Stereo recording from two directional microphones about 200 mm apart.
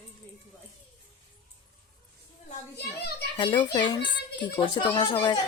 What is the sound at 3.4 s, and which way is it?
Speech, 25° left (ahead or behind).